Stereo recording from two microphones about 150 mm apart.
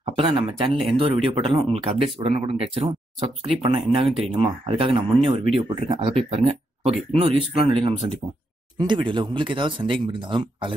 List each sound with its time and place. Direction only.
0.1 s speech: 35° right (ahead or behind)